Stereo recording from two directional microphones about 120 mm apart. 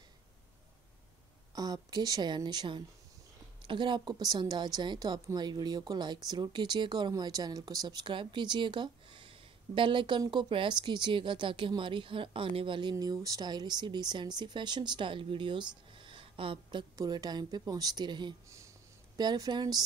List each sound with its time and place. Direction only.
1.5 s speech: 30° right (ahead or behind)
12.9 s speech: 30° right (ahead or behind)
16.0 s a sound: 45° right (ahead or behind)
16.9 s speech: 30° right (ahead or behind)